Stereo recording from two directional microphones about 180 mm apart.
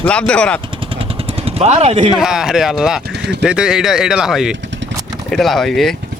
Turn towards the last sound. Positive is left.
turn(degrees=0)  # may be behind; listen again after turning